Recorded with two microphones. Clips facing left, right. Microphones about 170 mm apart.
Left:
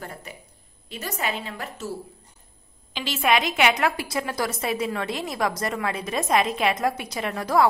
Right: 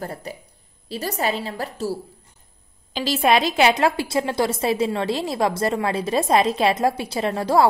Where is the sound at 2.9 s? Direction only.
35° right (ahead or behind).